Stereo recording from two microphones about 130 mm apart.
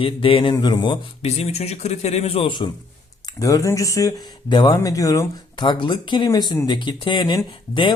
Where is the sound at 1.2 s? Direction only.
55° left (ahead or behind).